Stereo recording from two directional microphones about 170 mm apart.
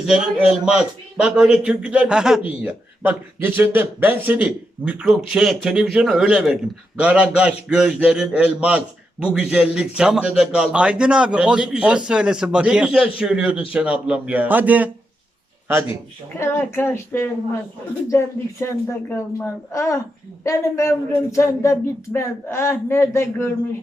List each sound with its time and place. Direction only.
0.0 s a man's voice: 5° right (ahead or behind)
16.4 s speech: 15° left (ahead or behind)
18.6 s speech: 15° left (ahead or behind)